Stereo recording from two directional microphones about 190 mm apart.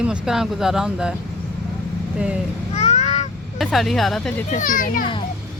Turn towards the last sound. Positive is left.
turn(degrees=45)  # may be behind; listen again after turning